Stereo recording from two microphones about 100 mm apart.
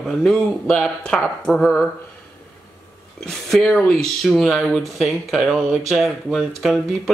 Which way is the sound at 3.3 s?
5° left (ahead or behind).